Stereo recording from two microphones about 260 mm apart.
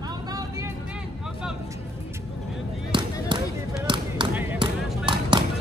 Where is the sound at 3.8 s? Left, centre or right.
Centre.